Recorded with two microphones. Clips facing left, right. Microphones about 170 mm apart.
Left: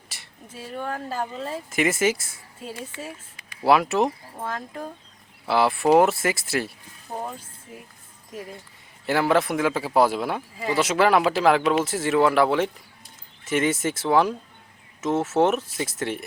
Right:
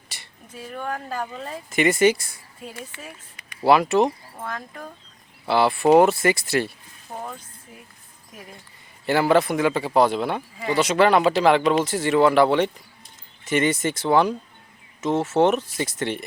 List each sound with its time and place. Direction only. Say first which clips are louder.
0.1 s a sound: right 3 dB; centre (ahead or behind)
0.5 s speech: even; 30° left (ahead or behind)
1.7 s speech: right 4 dB; centre (ahead or behind)
3.6 s speech: right 2 dB; centre (ahead or behind)
4.4 s speech: left 2 dB; 30° left (ahead or behind)
5.5 s speech: right 2 dB; centre (ahead or behind)
9.0 s speech: right 2 dB; centre (ahead or behind)